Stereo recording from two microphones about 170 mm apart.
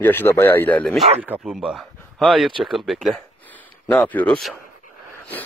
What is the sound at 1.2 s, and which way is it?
Speech, 5° right (ahead or behind).